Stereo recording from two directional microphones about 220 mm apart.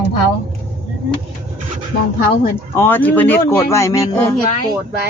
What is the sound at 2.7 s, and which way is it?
Speech, 10° left (ahead or behind).